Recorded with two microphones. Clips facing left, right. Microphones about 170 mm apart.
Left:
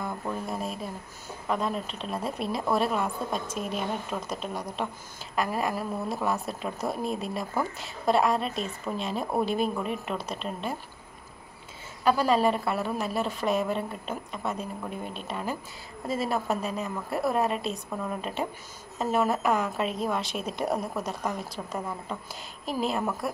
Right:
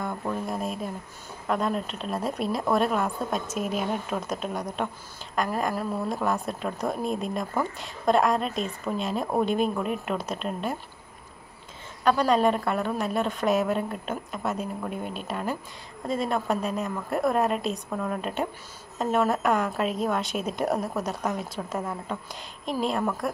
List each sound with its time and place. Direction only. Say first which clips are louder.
0.3 s a woman's voice: right 3 dB; centre (ahead or behind)
12.0 s a woman's voice: right 1 dB; 5° left (ahead or behind)